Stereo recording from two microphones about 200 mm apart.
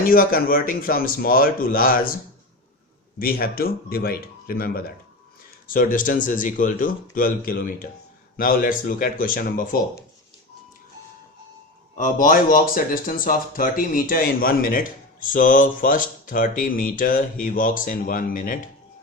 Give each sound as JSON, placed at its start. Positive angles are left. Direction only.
{"t": 0.0, "sound": "speech", "side_deg": 45}
{"t": 3.2, "sound": "speech", "side_deg": 45}
{"t": 11.9, "sound": "speech", "side_deg": 40}